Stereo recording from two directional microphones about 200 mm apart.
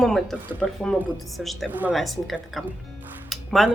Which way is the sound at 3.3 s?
Centre (ahead or behind).